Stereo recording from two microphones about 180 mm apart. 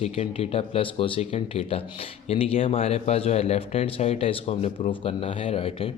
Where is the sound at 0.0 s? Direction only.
35° left (ahead or behind).